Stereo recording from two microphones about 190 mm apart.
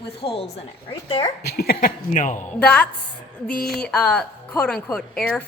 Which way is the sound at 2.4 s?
5° left (ahead or behind).